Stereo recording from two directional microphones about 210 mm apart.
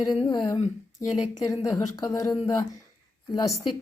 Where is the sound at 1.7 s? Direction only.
15° left (ahead or behind).